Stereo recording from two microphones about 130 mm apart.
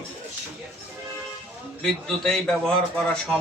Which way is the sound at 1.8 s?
5° left (ahead or behind).